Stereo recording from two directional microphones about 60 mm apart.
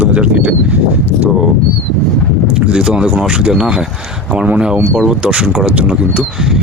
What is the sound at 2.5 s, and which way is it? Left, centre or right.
Speech, centre.